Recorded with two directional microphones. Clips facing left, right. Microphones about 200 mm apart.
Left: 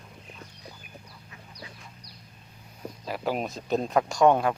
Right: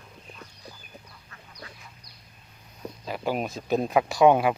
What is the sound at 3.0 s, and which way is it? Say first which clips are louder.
Speech: right 1 dB; centre (ahead or behind).